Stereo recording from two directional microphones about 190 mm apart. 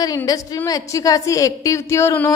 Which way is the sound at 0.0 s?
20° left (ahead or behind).